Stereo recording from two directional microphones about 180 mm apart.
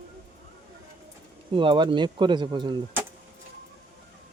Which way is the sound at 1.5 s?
25° right (ahead or behind).